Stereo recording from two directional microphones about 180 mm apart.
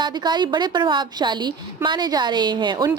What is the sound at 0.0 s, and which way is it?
A woman's voice, 25° right (ahead or behind).